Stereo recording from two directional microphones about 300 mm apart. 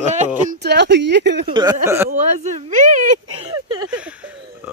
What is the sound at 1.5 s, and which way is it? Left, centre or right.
Speech, centre.